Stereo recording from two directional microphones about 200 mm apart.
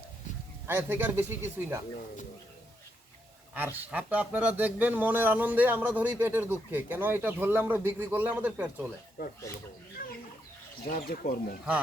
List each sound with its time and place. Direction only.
0.7 s speech: 10° right (ahead or behind)
3.5 s speech: 10° right (ahead or behind)
9.2 s speech: 45° left (ahead or behind)
10.0 s chicken: 45° left (ahead or behind)
10.8 s speech: 45° left (ahead or behind)